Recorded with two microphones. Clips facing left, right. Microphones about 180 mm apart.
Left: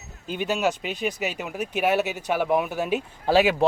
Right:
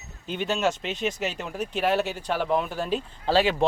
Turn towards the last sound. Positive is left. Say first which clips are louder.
# left 2 dB
turn(degrees=10)  # may be behind; listen again after turning